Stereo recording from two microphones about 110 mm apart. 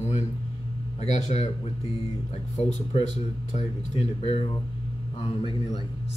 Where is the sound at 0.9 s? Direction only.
80° left; by 4.5 s 60° left (ahead or behind).